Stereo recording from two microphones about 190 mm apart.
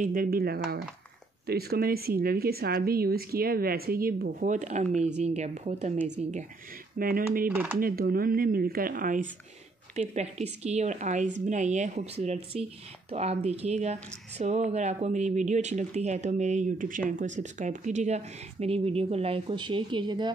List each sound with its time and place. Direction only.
0.0 s speech: 50° right (ahead or behind)
7.0 s speech: 50° right (ahead or behind)
7.4 s speech: 10° right (ahead or behind)
7.8 s speech: 50° right (ahead or behind)
9.9 s speech: 35° right (ahead or behind)